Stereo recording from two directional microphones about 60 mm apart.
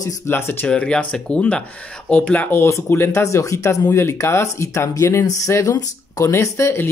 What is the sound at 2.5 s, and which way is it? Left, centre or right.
Speech, left.